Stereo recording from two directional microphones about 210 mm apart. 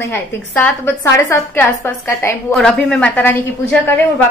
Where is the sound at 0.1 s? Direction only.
10° left (ahead or behind).